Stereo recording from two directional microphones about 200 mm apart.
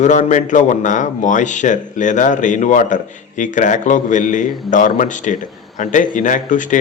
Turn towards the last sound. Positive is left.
turn(degrees=40)  # may be behind; listen again after turning